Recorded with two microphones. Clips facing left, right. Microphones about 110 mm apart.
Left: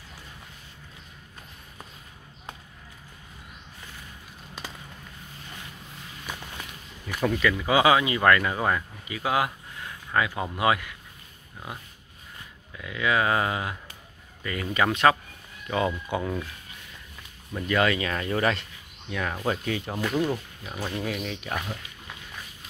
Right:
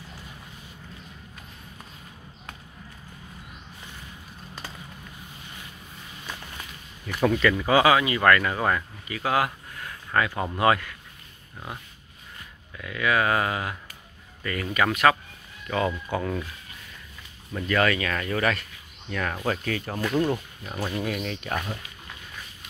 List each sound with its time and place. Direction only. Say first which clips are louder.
7.2 s speech: right 3 dB; centre (ahead or behind)
7.6 s speech: even; 15° left (ahead or behind)
12.7 s speech: right 1 dB; 20° left (ahead or behind)
16.1 s speech: right 1 dB; 15° left (ahead or behind)
17.6 s speech: even; 20° left (ahead or behind)
19.0 s speech: even; 10° left (ahead or behind)
20.0 s speech: right 3 dB; centre (ahead or behind)